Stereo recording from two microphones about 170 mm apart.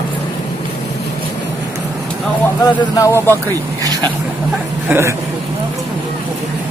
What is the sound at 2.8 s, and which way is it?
Speech, 20° left (ahead or behind).